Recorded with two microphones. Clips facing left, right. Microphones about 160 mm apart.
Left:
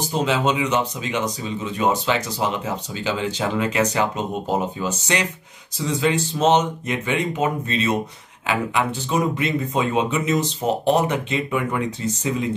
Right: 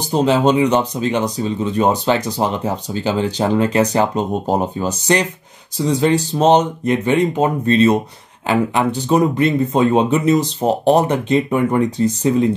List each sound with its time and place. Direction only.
0.1 s speech: 35° right (ahead or behind)